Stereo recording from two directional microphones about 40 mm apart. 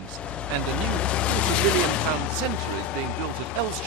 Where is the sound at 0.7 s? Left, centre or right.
Left.